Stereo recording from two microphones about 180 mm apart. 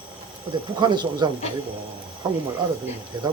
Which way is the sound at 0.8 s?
25° right (ahead or behind).